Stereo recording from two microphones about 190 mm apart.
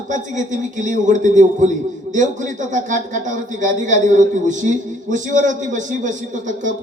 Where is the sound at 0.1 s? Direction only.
40° right (ahead or behind).